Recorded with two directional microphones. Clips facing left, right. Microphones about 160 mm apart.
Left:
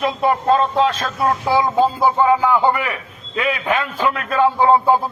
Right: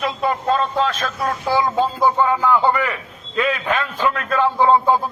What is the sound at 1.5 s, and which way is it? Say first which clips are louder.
A man's voice: left 1 dB; 10° left (ahead or behind).